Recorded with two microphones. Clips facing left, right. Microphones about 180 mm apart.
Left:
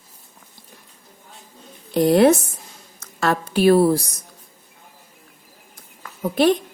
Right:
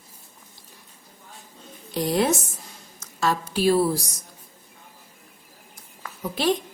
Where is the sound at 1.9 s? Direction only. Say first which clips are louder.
Left 8 dB; 60° left (ahead or behind).